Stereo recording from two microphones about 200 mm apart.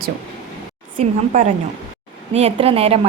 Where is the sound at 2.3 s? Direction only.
30° right (ahead or behind).